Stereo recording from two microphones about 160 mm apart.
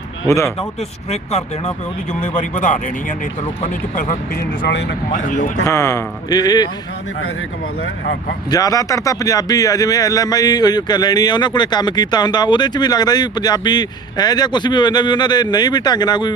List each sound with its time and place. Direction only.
0.3 s speech: 20° left (ahead or behind)
1.1 s speech: 45° left (ahead or behind)
4.7 s speech: 90° left
5.1 s speech: 55° left (ahead or behind)
5.6 s speech: 20° left (ahead or behind)
8.4 s speech: 25° left (ahead or behind)